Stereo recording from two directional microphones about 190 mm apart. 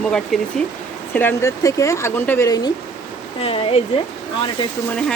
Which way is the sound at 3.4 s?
30° left (ahead or behind).